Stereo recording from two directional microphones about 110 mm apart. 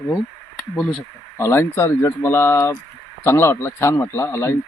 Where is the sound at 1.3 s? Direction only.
20° left (ahead or behind).